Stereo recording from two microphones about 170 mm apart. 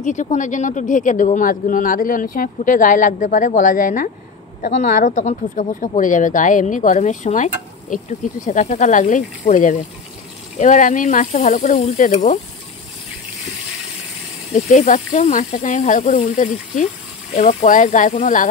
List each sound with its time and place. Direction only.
0.0 s speech: 45° left (ahead or behind)
14.5 s speech: 45° left (ahead or behind)